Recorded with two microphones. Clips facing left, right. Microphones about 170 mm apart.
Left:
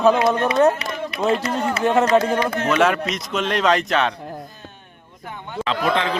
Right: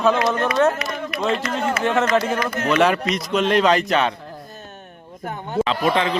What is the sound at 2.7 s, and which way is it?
Speech, centre (ahead or behind).